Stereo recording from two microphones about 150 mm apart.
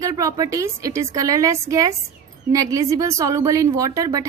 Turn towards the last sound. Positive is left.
turn(degrees=-20)  # may be behind; listen again after turning